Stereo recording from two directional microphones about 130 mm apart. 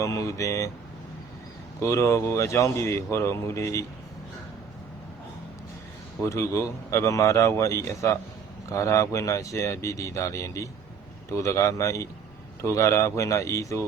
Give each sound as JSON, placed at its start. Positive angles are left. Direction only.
{"t": 0.0, "sound": "speech", "side_deg": 25}
{"t": 1.8, "sound": "speech", "side_deg": 20}
{"t": 6.2, "sound": "speech", "side_deg": 20}